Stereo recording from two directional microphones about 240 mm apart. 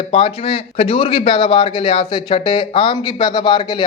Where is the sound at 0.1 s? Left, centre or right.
Left.